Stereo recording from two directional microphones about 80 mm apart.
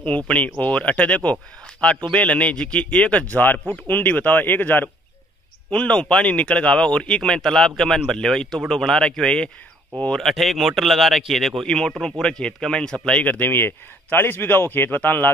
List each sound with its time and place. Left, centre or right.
0.0 s speech: centre
5.7 s speech: centre
10.2 s speech: centre; by 15.3 s left